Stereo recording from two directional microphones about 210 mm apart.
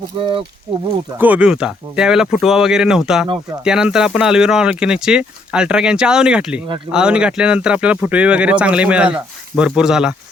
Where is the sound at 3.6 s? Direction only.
5° right (ahead or behind).